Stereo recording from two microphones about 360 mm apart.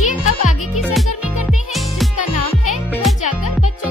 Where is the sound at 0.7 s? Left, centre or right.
Centre.